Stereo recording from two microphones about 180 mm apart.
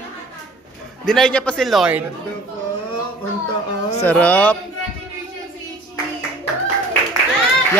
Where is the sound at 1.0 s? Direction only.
5° left (ahead or behind).